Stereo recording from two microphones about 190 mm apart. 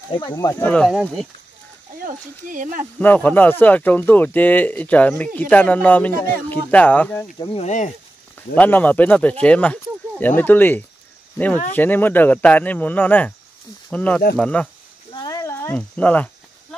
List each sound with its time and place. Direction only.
0.1 s speech: 25° left (ahead or behind)
0.6 s speech: 5° left (ahead or behind)
2.0 s speech: 45° right (ahead or behind)
3.0 s speech: 10° left (ahead or behind)
7.3 s speech: 30° left (ahead or behind)
8.5 s speech: 10° left (ahead or behind)
15.2 s cricket: 15° left (ahead or behind)